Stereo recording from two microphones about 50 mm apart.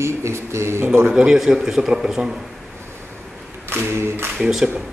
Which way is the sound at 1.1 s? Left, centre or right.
Centre.